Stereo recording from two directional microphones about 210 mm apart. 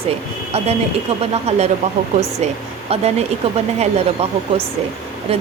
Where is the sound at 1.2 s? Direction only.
30° right (ahead or behind).